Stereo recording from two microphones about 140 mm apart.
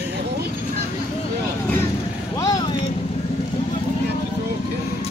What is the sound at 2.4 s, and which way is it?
Vehicle, 25° left (ahead or behind).